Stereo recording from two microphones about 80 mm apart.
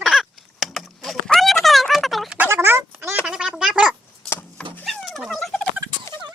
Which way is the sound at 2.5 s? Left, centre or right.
Right.